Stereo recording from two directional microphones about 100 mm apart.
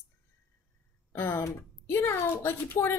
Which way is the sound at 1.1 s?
25° left (ahead or behind).